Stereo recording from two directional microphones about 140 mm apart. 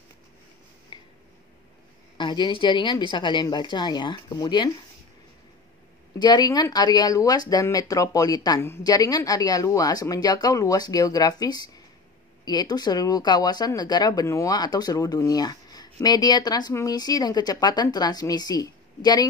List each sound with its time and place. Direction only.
2.1 s a woman's voice: 35° left (ahead or behind)
6.1 s speech: 30° left (ahead or behind)